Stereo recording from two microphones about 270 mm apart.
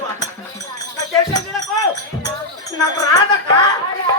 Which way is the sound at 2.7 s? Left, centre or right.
Centre.